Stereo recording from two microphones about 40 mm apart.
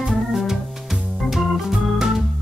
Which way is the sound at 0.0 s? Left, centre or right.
Centre.